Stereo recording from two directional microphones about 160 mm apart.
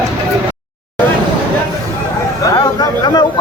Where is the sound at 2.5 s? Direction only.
25° left (ahead or behind).